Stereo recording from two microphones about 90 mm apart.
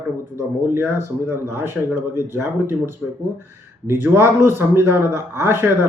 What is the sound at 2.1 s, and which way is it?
Speech, 30° right (ahead or behind).